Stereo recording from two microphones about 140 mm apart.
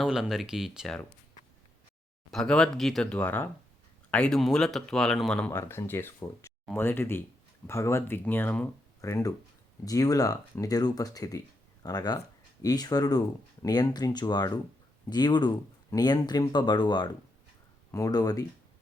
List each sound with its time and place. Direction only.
0.0 s speech: 5° right (ahead or behind)
2.3 s speech: 5° left (ahead or behind)
5.5 s speech: 20° left (ahead or behind)